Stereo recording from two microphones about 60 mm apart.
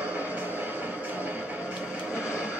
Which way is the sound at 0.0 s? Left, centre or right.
Right.